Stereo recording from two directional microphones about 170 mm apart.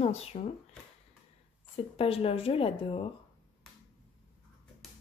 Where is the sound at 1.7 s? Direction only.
35° left (ahead or behind).